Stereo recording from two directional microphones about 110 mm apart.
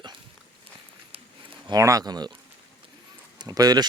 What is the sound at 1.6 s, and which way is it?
Speech, 35° right (ahead or behind).